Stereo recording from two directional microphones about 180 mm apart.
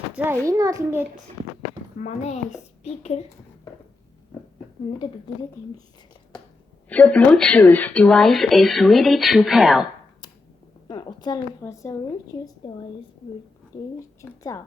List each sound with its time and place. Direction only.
0.4 s a child's voice: 20° right (ahead or behind)
2.0 s a woman's voice: 40° left (ahead or behind)
6.9 s speech: 5° left (ahead or behind)
10.8 s a woman's voice: 25° left (ahead or behind)
14.2 s speech: 15° left (ahead or behind)